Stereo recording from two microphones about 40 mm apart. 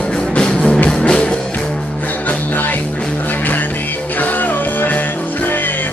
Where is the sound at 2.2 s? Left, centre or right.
Left.